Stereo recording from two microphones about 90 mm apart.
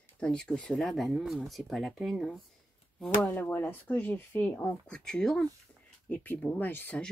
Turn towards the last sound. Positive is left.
turn(degrees=20)  # may be behind; listen again after turning